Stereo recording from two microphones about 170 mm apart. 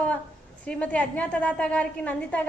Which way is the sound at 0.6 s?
5° left (ahead or behind).